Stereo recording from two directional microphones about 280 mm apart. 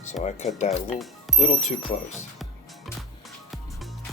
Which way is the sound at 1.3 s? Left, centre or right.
Left.